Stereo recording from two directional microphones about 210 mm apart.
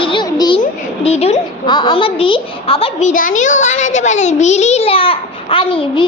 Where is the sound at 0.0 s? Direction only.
20° left (ahead or behind).